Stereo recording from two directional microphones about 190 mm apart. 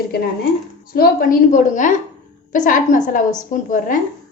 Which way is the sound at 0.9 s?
50° left (ahead or behind).